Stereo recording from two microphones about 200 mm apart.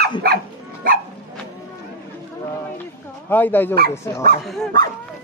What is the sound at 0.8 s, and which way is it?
Dog, 45° right (ahead or behind).